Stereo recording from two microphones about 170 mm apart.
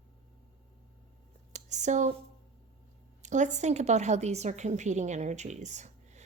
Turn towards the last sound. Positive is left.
turn(degrees=-45)  # may be behind; listen again after turning